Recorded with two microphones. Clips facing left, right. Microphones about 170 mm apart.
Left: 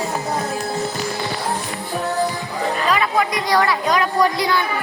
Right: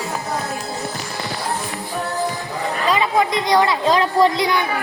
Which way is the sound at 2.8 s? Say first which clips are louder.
Right 3 dB; 25° right (ahead or behind).